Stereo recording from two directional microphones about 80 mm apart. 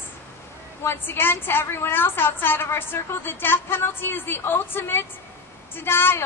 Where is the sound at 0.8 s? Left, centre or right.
Left.